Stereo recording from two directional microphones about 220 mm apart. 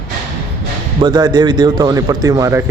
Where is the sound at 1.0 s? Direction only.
20° right (ahead or behind).